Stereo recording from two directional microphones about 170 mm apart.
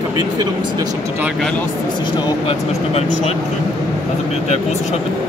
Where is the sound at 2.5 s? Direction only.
40° left (ahead or behind).